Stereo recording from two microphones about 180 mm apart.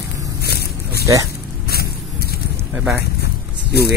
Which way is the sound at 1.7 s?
60° left (ahead or behind).